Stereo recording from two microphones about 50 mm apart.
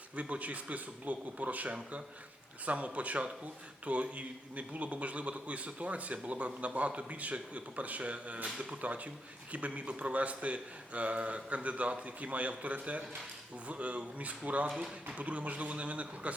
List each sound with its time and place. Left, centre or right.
0.2 s a man's voice: right
8.8 s a man's voice: right